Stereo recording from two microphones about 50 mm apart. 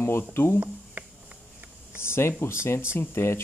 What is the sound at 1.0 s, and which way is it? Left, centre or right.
Insect, right.